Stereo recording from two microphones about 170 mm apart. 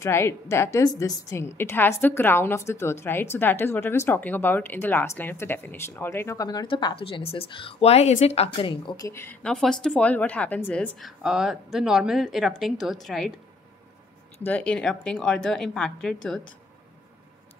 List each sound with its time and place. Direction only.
0.0 s a woman's voice: 15° left (ahead or behind)
9.1 s a woman's voice: 10° left (ahead or behind)
14.4 s a woman's voice: 10° left (ahead or behind)